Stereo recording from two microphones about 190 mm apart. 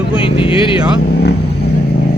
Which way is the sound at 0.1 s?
30° left (ahead or behind).